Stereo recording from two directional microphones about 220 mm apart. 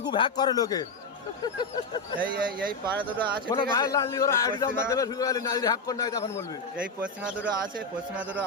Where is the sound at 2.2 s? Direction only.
40° right (ahead or behind).